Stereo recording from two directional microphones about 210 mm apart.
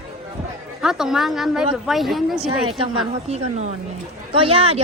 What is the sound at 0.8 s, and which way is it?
Speech, centre (ahead or behind).